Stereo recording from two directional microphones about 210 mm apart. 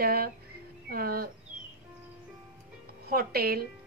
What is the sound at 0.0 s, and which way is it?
A woman's voice, 45° right (ahead or behind).